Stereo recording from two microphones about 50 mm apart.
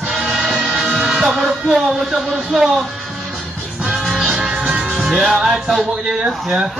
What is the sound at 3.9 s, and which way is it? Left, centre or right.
Music, centre.